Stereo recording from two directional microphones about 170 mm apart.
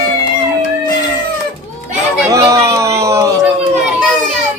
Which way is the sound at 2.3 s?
20° right (ahead or behind).